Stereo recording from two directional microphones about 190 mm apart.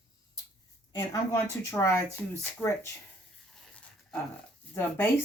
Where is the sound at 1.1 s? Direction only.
15° left (ahead or behind).